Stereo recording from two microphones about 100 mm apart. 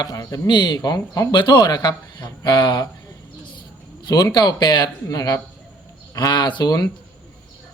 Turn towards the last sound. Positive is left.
turn(degrees=40)  # may be behind; listen again after turning